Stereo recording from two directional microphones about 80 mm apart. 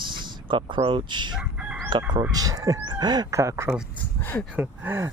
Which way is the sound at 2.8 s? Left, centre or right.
Right.